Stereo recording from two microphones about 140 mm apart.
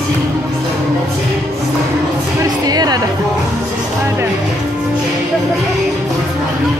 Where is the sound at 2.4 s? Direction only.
30° right (ahead or behind).